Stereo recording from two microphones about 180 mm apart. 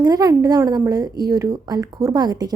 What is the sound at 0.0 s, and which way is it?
A woman's voice, 20° right (ahead or behind).